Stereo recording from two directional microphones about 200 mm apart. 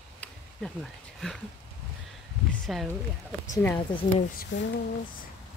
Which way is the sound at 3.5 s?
10° left (ahead or behind).